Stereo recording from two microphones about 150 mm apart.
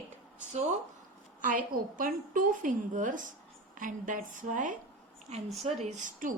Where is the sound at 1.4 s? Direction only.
60° right (ahead or behind).